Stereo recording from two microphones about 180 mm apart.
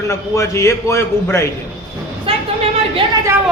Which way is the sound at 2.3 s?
30° right (ahead or behind).